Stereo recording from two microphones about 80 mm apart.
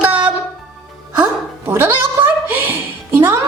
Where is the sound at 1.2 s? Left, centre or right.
Right.